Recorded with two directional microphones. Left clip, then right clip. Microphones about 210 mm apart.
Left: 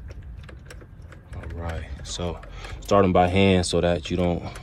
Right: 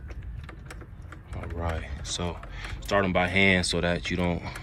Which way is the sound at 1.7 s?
5° right (ahead or behind).